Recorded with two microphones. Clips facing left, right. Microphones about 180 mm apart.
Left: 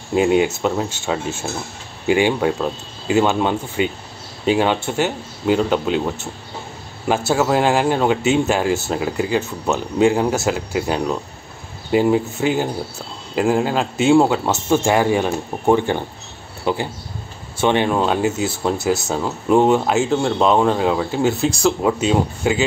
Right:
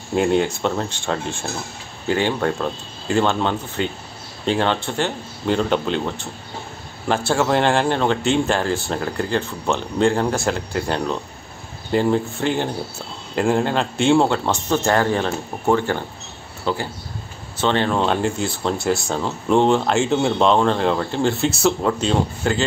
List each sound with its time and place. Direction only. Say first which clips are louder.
0.1 s speech: left 2 dB; 5° left (ahead or behind)